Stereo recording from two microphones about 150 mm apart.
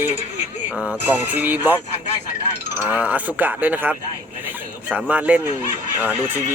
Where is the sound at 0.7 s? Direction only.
10° right (ahead or behind).